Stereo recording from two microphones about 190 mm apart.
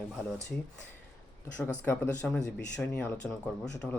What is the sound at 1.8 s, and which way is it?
Speech, 10° left (ahead or behind).